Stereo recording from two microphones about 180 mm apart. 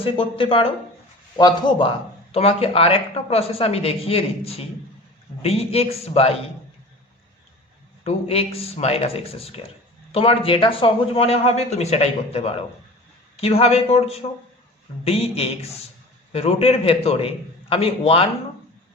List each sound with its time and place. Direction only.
0.0 s a man's voice: 30° left (ahead or behind)
8.0 s speech: 35° left (ahead or behind)